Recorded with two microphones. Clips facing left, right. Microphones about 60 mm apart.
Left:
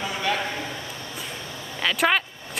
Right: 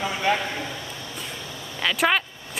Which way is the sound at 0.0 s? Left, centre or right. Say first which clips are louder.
Right 3 dB; right.